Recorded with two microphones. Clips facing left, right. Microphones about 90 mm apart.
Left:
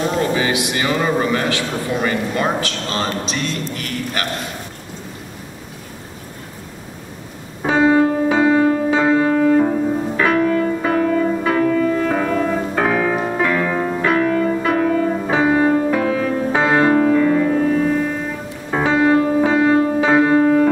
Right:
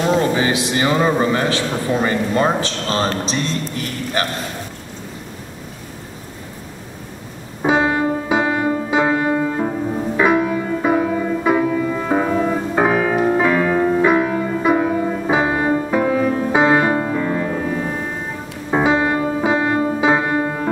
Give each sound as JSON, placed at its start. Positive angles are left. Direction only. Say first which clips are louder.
{"t": 0.4, "sound": "a man's voice", "louder": "right 1 dB", "side_deg": -30}
{"t": 7.6, "sound": "music", "louder": "left 3 dB", "side_deg": -10}
{"t": 18.7, "sound": "music", "louder": "left 1 dB", "side_deg": -10}